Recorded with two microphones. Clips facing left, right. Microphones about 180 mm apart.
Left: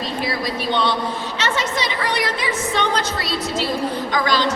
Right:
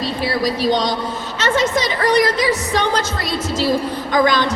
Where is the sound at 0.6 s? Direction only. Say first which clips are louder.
Right 3 dB; 40° right (ahead or behind).